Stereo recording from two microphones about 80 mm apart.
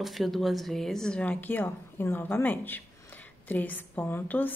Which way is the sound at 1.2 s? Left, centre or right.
Left.